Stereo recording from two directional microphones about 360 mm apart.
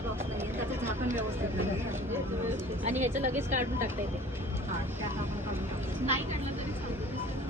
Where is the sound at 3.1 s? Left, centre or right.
Right.